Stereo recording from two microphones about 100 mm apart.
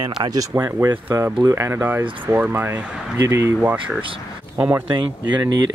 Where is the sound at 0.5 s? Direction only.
30° right (ahead or behind).